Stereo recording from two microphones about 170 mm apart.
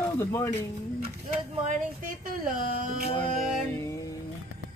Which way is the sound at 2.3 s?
55° right (ahead or behind).